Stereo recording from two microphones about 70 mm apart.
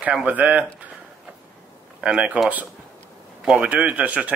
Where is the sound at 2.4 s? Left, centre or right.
Right.